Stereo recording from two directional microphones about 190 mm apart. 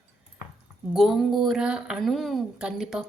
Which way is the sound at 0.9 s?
Centre (ahead or behind).